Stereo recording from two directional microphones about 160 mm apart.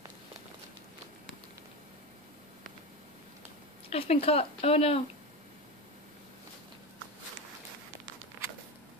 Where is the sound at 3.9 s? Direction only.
40° left (ahead or behind).